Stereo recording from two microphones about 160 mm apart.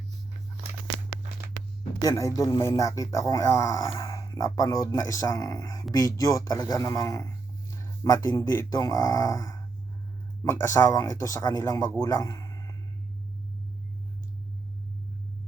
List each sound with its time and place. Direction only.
2.0 s speech: 20° left (ahead or behind)